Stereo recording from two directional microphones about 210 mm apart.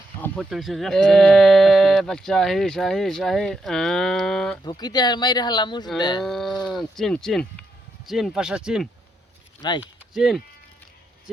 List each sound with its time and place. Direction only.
0.2 s speech: centre (ahead or behind)
4.8 s speech: 20° left (ahead or behind)
6.2 s speech: centre (ahead or behind)
9.6 s speech: 20° left (ahead or behind)
9.8 s speech: centre (ahead or behind)